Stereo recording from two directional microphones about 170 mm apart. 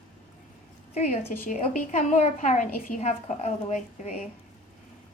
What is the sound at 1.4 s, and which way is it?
A woman's voice, 45° left (ahead or behind).